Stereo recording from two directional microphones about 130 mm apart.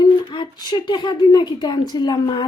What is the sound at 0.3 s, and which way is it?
A woman's voice, 35° left (ahead or behind).